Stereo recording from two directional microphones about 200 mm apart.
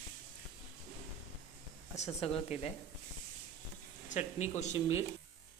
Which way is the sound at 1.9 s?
35° left (ahead or behind).